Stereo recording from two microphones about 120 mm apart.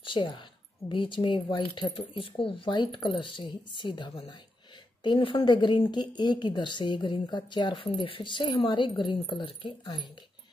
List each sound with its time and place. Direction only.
0.0 s a woman's voice: 40° left (ahead or behind)